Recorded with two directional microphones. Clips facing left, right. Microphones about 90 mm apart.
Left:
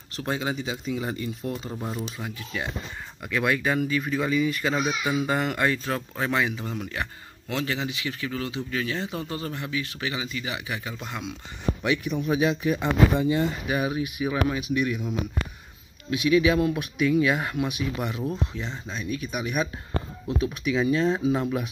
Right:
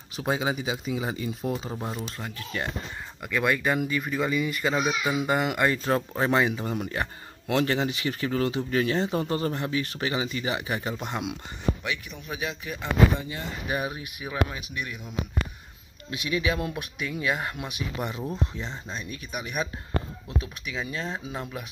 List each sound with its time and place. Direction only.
0.1 s speech: 10° right (ahead or behind)
2.0 s speech: 5° left (ahead or behind)
5.9 s speech: 30° right (ahead or behind)
6.6 s speech: 40° right (ahead or behind)
7.4 s speech: 50° right (ahead or behind)
11.8 s a man's voice: 15° left (ahead or behind)
16.6 s speech: 5° right (ahead or behind)
17.3 s speech: 5° left (ahead or behind)
18.2 s speech: 5° right (ahead or behind)
19.3 s speech: 10° left (ahead or behind)